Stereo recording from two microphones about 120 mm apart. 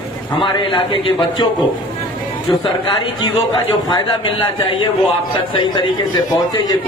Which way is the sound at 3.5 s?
40° left (ahead or behind).